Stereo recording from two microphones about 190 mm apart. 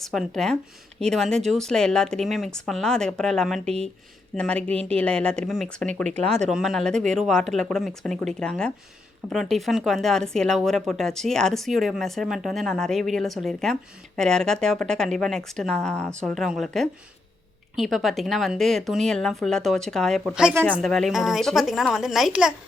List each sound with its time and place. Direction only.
0.0 s speech: centre (ahead or behind)
6.1 s speech: 35° right (ahead or behind)
6.5 s speech: centre (ahead or behind)